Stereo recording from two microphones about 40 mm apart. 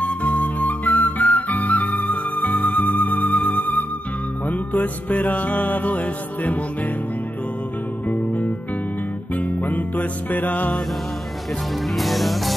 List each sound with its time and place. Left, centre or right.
0.0 s flute: left
3.4 s music: left
8.1 s music: left
12.0 s music: centre